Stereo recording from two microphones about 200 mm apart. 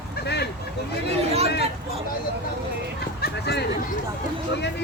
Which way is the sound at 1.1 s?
30° right (ahead or behind).